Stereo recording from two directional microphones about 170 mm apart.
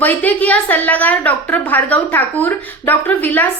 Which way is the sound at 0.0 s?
10° left (ahead or behind).